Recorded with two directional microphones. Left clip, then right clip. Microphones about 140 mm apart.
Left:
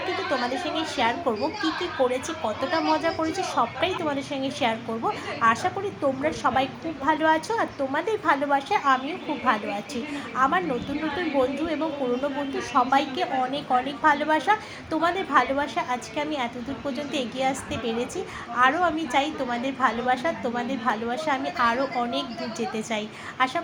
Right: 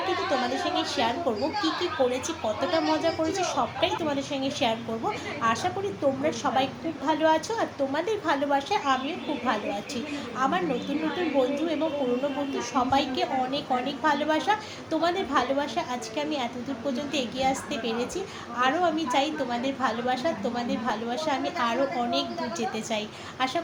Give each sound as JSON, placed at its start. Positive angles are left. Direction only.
{"t": 0.3, "sound": "a woman's voice", "side_deg": 15}
{"t": 10.3, "sound": "a woman's voice", "side_deg": 20}
{"t": 12.5, "sound": "a woman's voice", "side_deg": 15}